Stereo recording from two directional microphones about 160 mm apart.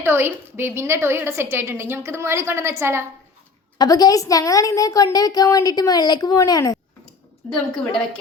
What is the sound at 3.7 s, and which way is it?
A woman's voice, 25° left (ahead or behind).